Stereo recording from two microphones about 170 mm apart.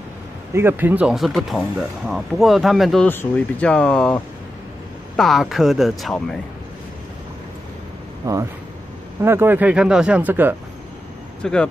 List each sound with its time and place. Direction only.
0.5 s speech: 15° right (ahead or behind)
8.2 s speech: 20° right (ahead or behind)
11.4 s speech: 5° left (ahead or behind)